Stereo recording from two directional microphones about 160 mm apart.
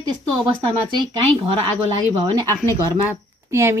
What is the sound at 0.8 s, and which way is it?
Speech, 30° right (ahead or behind).